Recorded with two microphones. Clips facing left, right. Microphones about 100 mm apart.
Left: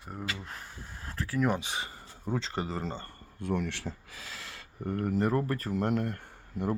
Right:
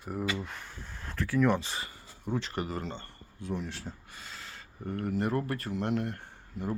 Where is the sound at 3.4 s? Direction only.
60° left (ahead or behind); by 4.7 s 90° left.